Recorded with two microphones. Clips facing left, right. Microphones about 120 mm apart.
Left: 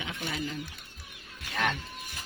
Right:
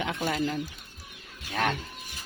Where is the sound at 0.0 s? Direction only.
65° right (ahead or behind).